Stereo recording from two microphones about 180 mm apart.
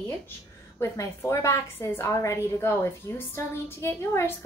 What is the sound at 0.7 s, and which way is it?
A woman's voice, 15° left (ahead or behind).